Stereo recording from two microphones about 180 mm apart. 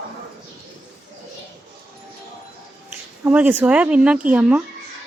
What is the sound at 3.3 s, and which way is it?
Speech, 10° right (ahead or behind).